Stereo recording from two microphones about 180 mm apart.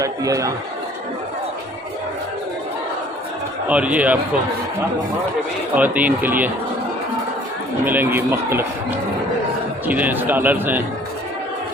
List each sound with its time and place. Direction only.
0.0 s a man's voice: 20° right (ahead or behind)
3.7 s a man's voice: 5° right (ahead or behind)
5.7 s a man's voice: 10° right (ahead or behind)
7.9 s a man's voice: 10° right (ahead or behind)
9.8 s a man's voice: 10° right (ahead or behind)